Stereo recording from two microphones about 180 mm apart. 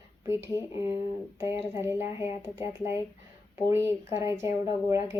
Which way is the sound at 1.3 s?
15° right (ahead or behind).